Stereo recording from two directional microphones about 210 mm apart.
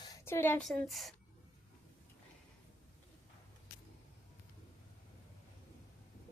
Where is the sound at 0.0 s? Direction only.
15° left (ahead or behind).